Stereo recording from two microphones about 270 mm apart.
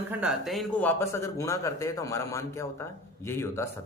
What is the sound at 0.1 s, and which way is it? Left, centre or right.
Speech, centre.